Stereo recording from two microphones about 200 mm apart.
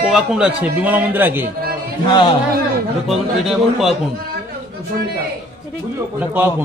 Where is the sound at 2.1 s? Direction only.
25° left (ahead or behind).